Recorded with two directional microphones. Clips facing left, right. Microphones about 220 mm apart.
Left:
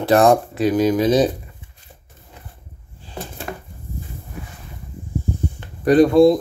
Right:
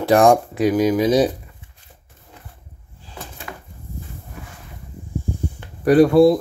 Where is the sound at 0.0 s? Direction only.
15° right (ahead or behind).